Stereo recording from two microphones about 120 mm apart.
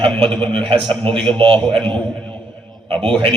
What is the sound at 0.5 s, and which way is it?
A man's voice, 50° right (ahead or behind).